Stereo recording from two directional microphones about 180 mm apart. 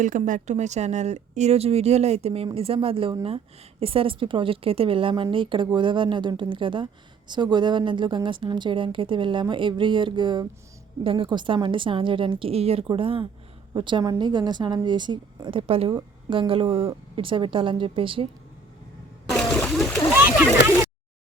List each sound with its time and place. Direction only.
0.0 s a woman's voice: 45° right (ahead or behind); by 18.3 s 30° right (ahead or behind)
19.3 s splash: 5° left (ahead or behind)
20.1 s splash: 10° right (ahead or behind)